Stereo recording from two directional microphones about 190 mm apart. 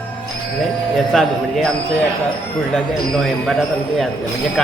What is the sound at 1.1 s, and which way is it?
Speech, centre (ahead or behind).